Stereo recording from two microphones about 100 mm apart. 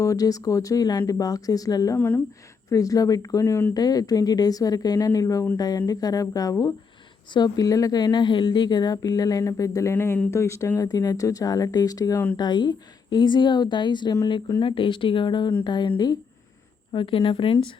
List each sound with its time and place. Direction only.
0.0 s a woman's voice: 35° left (ahead or behind)
2.0 s speech: 20° left (ahead or behind)
2.6 s a woman's voice: 35° left (ahead or behind)
3.8 s a woman's voice: 40° left (ahead or behind)
12.4 s a woman's voice: 50° left (ahead or behind)
16.9 s a woman's voice: 55° left (ahead or behind)